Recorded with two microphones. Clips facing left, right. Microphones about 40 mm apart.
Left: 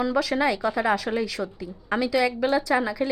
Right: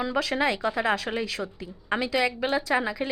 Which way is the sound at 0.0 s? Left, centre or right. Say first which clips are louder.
Left 3 dB; centre.